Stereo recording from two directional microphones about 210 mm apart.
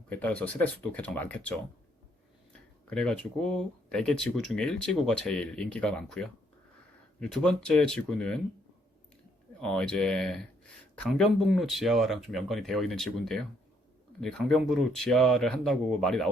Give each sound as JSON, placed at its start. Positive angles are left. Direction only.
{"t": 0.1, "sound": "speech", "side_deg": 5}
{"t": 2.9, "sound": "speech", "side_deg": 5}
{"t": 9.6, "sound": "speech", "side_deg": 5}